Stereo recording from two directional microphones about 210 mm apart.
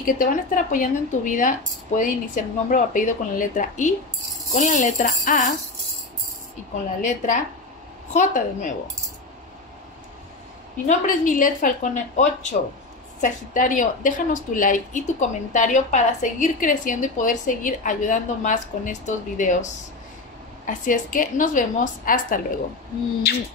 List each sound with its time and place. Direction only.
0.0 s a woman's voice: 40° left (ahead or behind)
7.0 s a woman's voice: 35° left (ahead or behind)
10.9 s a woman's voice: 40° left (ahead or behind)